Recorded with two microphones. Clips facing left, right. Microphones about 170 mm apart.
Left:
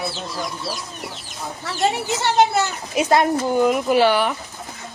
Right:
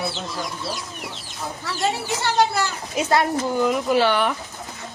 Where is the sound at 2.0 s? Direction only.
20° left (ahead or behind).